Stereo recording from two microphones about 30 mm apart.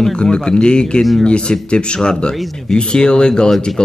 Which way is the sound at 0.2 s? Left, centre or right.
Left.